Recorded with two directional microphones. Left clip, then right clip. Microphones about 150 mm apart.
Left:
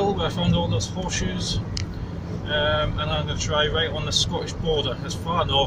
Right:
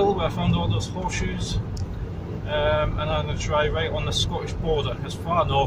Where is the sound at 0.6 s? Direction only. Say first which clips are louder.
Left 2 dB; 10° right (ahead or behind).